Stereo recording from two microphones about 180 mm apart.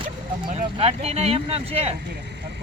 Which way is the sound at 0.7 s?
35° right (ahead or behind).